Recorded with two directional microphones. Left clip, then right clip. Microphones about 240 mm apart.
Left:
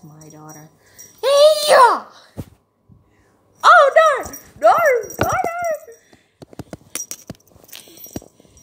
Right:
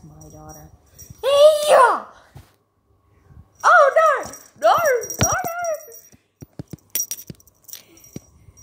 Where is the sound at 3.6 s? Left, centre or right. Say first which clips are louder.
Left 3 dB; left.